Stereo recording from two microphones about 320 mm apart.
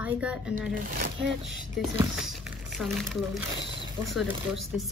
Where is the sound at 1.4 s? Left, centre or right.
Centre.